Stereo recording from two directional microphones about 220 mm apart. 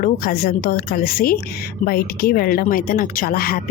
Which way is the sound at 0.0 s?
40° left (ahead or behind).